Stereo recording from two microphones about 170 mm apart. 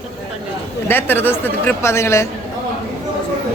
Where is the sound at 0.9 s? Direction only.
10° left (ahead or behind).